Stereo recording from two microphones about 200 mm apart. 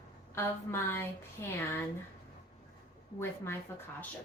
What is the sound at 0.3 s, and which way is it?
Speech, 10° left (ahead or behind).